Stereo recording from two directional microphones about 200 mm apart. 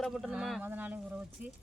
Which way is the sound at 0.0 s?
Centre (ahead or behind).